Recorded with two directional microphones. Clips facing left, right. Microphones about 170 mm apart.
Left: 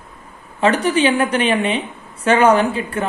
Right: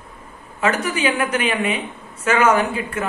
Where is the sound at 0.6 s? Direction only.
30° left (ahead or behind).